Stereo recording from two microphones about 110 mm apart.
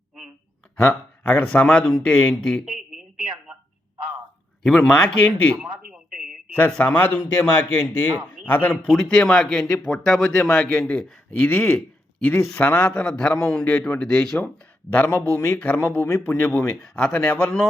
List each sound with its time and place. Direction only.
0.8 s a man's voice: 5° left (ahead or behind)
4.6 s a man's voice: 5° left (ahead or behind)
5.5 s a sound: 10° right (ahead or behind)
6.5 s a man's voice: 10° left (ahead or behind)